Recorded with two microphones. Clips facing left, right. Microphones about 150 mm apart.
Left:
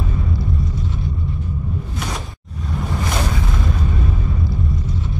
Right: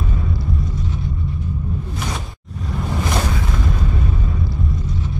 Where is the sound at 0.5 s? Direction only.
Centre (ahead or behind).